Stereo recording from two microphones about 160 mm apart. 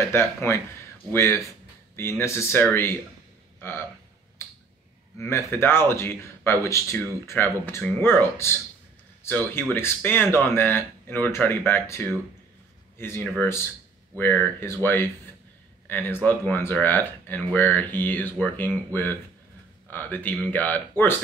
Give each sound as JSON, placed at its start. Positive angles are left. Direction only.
{"t": 0.1, "sound": "a man's voice", "side_deg": 15}
{"t": 4.4, "sound": "a sound", "side_deg": 15}
{"t": 5.1, "sound": "a man's voice", "side_deg": 15}